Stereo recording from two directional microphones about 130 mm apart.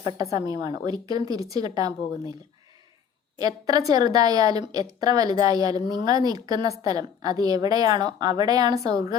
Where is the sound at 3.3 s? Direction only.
30° right (ahead or behind).